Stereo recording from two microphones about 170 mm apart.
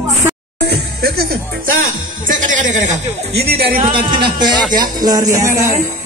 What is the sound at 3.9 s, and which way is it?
Speech, 30° right (ahead or behind).